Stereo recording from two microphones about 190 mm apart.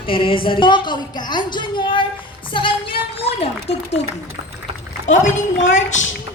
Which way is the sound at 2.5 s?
25° left (ahead or behind).